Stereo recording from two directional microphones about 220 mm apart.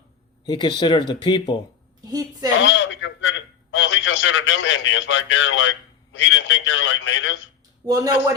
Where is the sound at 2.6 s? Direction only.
55° left (ahead or behind).